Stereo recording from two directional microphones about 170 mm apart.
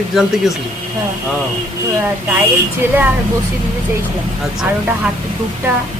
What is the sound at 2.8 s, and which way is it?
Speech, 10° right (ahead or behind).